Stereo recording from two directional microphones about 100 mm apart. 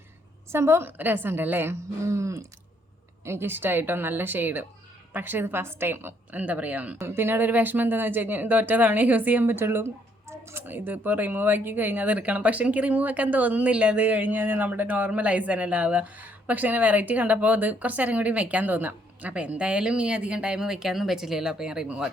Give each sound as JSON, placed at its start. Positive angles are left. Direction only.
{"t": 0.5, "sound": "a woman's voice", "side_deg": -25}